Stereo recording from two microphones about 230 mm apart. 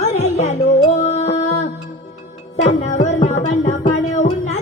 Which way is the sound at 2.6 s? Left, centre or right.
Left.